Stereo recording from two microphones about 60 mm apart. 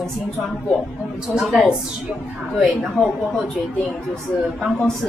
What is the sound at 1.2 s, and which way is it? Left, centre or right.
A woman's voice, centre.